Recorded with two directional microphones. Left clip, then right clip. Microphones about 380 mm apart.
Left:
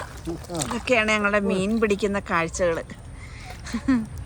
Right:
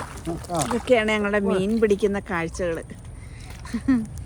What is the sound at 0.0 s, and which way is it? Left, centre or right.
Speech, right.